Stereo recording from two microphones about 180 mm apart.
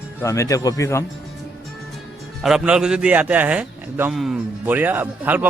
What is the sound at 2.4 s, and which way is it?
A man's voice, 5° right (ahead or behind).